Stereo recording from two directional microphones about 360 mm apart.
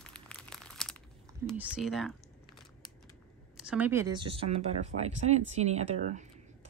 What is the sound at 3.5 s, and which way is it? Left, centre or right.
Speech, centre.